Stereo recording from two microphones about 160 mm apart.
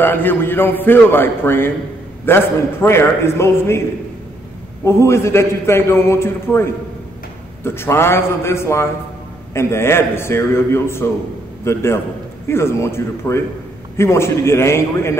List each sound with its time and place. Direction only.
0.0 s a man's voice: 10° left (ahead or behind)
4.8 s a man's voice: 15° left (ahead or behind)